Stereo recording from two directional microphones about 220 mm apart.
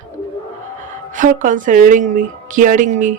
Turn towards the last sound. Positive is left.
turn(degrees=-35)  # may be behind; listen again after turning